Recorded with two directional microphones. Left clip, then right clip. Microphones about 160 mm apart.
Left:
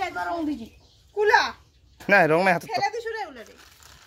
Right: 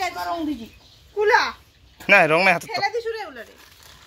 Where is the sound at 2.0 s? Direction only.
25° left (ahead or behind).